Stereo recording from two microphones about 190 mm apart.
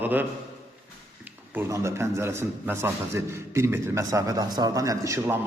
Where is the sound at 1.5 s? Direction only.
15° right (ahead or behind).